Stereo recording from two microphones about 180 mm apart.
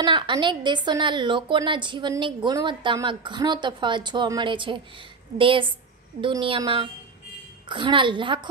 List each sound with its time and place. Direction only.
0.0 s a woman's voice: 25° right (ahead or behind)